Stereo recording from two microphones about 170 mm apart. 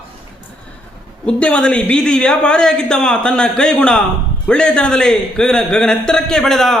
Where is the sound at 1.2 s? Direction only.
5° left (ahead or behind).